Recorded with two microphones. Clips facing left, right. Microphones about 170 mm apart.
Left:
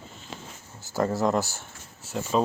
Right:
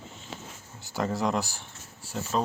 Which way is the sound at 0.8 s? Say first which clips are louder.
Left 4 dB; centre (ahead or behind).